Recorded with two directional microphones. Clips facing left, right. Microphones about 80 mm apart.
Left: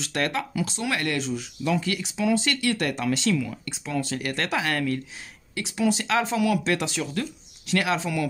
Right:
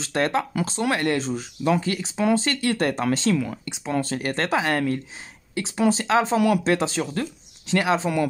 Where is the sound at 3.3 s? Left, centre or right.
Right.